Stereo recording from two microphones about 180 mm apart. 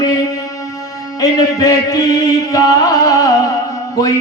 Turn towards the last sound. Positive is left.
turn(degrees=20)  # may be behind; listen again after turning